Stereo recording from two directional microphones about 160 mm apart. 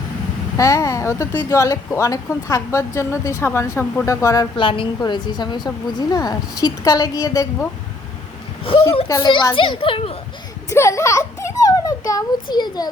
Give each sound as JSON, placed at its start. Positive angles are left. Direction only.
{"t": 0.5, "sound": "a woman's voice", "side_deg": 20}
{"t": 4.5, "sound": "a woman's voice", "side_deg": 30}
{"t": 8.7, "sound": "a sound", "side_deg": 35}
{"t": 9.0, "sound": "a woman's voice", "side_deg": 25}
{"t": 10.7, "sound": "a child's voice", "side_deg": 20}